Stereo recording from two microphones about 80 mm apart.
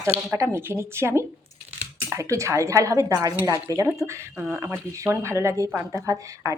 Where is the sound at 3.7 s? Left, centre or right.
Right.